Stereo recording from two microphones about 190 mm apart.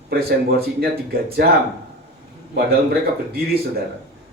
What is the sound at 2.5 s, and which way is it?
Speech, 55° right (ahead or behind).